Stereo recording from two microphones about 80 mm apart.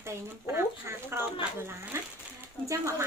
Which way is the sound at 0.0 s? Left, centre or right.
Right.